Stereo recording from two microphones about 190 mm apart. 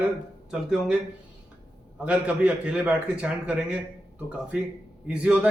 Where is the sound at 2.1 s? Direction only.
5° right (ahead or behind).